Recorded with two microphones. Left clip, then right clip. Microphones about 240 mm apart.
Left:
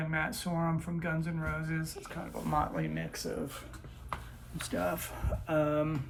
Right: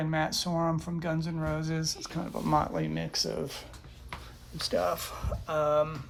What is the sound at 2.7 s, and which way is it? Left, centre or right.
Speech, right.